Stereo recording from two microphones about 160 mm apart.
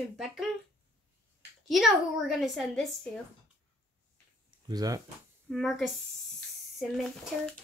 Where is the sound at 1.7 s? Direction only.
Centre (ahead or behind).